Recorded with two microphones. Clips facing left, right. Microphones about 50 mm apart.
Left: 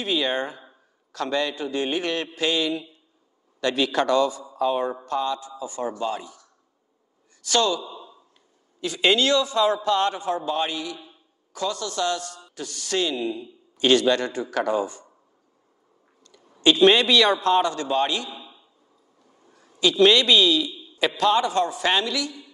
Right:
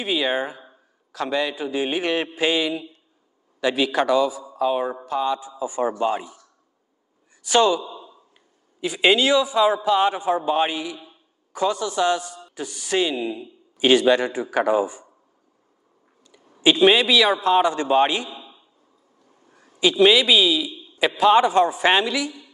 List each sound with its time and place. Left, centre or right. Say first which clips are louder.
0.0 s a man's voice: right 2 dB; centre
7.4 s a man's voice: right 4 dB; centre
16.3 s a sound: right 1 dB; centre
16.7 s a man's voice: even; centre
17.6 s a man's voice: right 5 dB; right
19.5 s a man's voice: right 2 dB; centre